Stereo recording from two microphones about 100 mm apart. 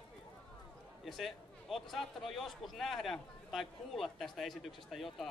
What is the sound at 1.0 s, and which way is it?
A man's voice, centre (ahead or behind).